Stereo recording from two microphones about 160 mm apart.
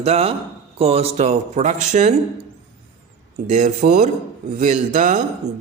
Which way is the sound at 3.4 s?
50° right (ahead or behind).